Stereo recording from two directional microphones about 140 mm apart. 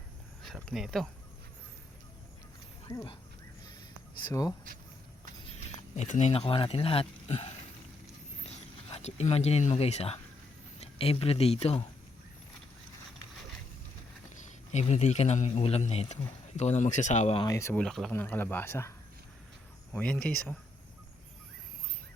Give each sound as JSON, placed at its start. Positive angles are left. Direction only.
{"t": 0.4, "sound": "speech", "side_deg": 0}
{"t": 2.8, "sound": "speech", "side_deg": 30}
{"t": 4.3, "sound": "speech", "side_deg": 25}
{"t": 6.0, "sound": "a man's voice", "side_deg": 55}
{"t": 8.9, "sound": "a man's voice", "side_deg": 50}
{"t": 14.7, "sound": "a man's voice", "side_deg": 50}
{"t": 17.5, "sound": "speech", "side_deg": 20}
{"t": 17.7, "sound": "speech", "side_deg": 5}
{"t": 18.1, "sound": "speech", "side_deg": 15}